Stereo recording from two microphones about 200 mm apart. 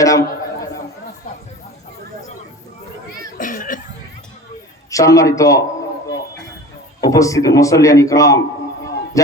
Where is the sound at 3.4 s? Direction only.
45° left (ahead or behind).